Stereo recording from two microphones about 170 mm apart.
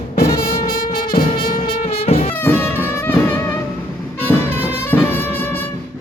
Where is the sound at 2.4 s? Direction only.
15° left (ahead or behind).